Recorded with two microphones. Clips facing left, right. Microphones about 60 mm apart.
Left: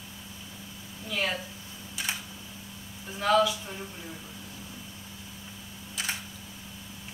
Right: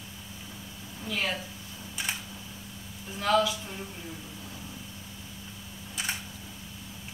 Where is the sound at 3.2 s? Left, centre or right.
Centre.